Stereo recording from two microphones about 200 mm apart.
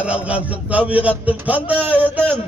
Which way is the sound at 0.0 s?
5° right (ahead or behind).